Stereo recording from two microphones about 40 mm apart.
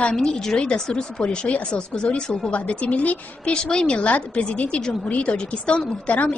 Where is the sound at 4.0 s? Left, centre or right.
Left.